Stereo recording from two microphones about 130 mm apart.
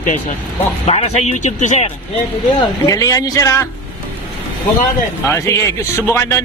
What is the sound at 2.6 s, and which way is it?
Speech, 25° left (ahead or behind).